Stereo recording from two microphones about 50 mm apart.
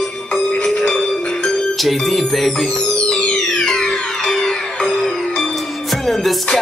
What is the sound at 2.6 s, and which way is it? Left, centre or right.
Music, centre.